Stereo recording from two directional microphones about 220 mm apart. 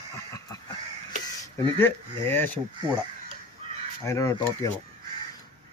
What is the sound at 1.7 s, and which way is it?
Mantra, 10° left (ahead or behind).